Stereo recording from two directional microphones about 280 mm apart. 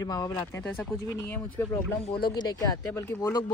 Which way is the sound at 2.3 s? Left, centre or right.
Centre.